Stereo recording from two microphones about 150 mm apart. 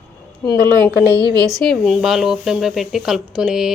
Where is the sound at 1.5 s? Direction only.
Centre (ahead or behind).